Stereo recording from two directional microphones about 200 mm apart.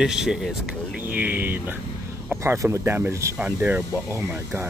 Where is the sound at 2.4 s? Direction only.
15° right (ahead or behind).